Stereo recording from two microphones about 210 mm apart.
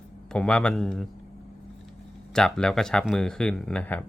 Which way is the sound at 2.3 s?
5° left (ahead or behind).